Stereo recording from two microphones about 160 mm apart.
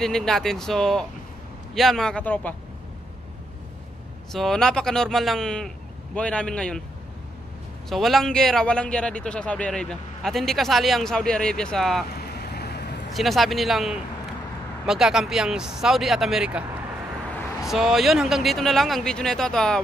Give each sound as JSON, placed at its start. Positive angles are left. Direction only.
{"t": 0.0, "sound": "a man's voice", "side_deg": 5}
{"t": 4.3, "sound": "a man's voice", "side_deg": 0}
{"t": 7.9, "sound": "a man's voice", "side_deg": 0}
{"t": 12.1, "sound": "vehicle", "side_deg": 80}
{"t": 13.1, "sound": "a man's voice", "side_deg": 0}
{"t": 17.6, "sound": "a man's voice", "side_deg": 0}